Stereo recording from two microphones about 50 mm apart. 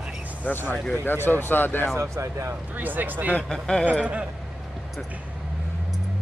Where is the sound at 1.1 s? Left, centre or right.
Left.